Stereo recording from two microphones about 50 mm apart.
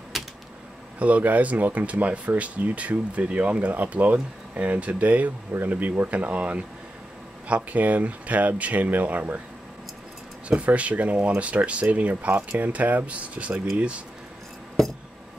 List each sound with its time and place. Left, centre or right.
0.1 s typewriter: centre
0.9 s speech: right
10.6 s speech: right